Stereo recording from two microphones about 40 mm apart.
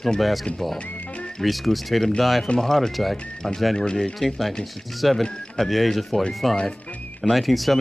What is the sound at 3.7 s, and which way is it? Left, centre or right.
Speech, centre.